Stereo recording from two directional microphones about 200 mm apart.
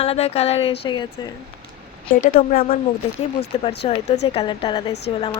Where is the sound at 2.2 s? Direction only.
45° left (ahead or behind).